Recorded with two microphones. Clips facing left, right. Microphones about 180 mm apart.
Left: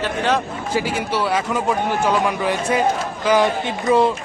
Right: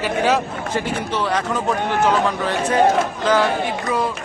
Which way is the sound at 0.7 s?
5° left (ahead or behind).